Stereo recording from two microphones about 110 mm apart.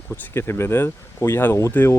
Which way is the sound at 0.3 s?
20° left (ahead or behind).